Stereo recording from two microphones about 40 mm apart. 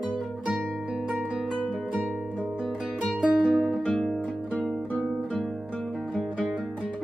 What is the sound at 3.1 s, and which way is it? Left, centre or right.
Music, right.